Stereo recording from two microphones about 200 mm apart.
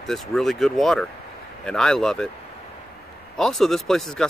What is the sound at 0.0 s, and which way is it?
Speech, centre (ahead or behind).